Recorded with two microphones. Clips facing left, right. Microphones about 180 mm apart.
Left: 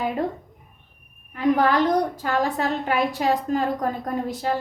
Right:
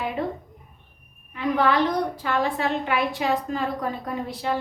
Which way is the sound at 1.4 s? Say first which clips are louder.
Left 2 dB; 45° left (ahead or behind).